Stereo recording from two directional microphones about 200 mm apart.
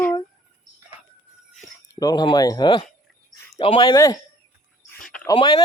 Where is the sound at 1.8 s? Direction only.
20° left (ahead or behind).